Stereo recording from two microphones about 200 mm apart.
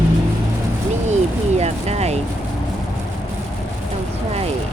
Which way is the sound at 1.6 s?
30° right (ahead or behind).